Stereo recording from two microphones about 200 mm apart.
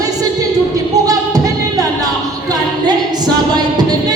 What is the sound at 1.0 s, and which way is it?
Music, 20° right (ahead or behind).